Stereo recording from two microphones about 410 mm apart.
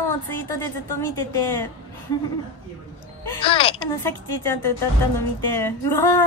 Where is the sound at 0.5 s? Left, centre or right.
Left.